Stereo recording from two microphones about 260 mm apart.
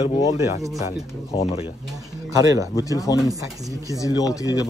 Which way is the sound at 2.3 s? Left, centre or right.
Centre.